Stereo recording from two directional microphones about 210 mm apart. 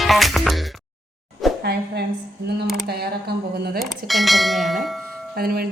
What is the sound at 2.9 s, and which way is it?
Speech, 50° right (ahead or behind).